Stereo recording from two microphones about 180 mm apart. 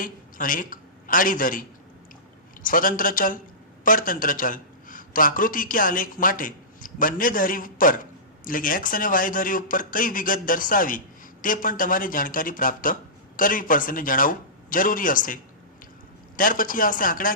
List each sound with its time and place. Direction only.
0.0 s a man's voice: 50° left (ahead or behind)
2.6 s a man's voice: 50° left (ahead or behind)
16.4 s speech: 50° left (ahead or behind)